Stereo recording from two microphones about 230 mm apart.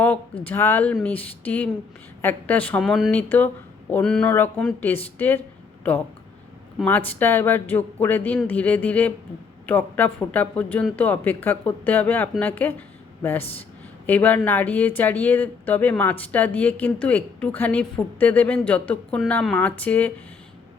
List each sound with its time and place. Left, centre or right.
0.4 s speech: centre
14.1 s speech: centre